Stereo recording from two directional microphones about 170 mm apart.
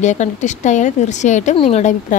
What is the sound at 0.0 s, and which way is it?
A woman's voice, 45° left (ahead or behind).